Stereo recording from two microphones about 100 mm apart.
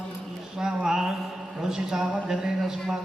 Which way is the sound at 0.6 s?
5° right (ahead or behind).